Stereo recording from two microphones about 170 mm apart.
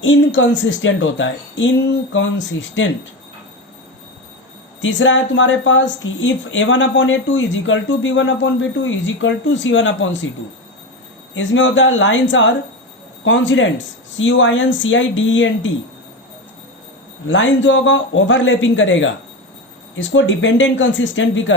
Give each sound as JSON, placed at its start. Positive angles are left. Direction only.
{"t": 0.0, "sound": "speech", "side_deg": 90}
{"t": 4.8, "sound": "speech", "side_deg": 90}
{"t": 11.3, "sound": "speech", "side_deg": 90}
{"t": 17.2, "sound": "speech", "side_deg": 90}